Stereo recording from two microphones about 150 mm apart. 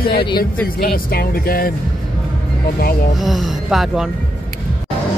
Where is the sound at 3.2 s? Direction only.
Centre (ahead or behind).